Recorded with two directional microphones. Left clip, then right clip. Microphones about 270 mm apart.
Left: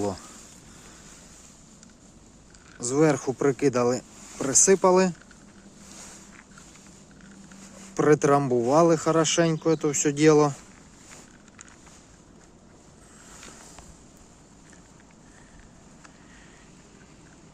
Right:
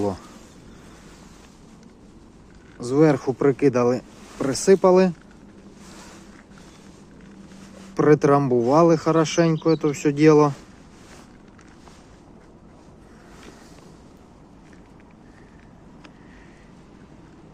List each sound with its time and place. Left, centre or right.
2.7 s speech: centre
7.9 s speech: centre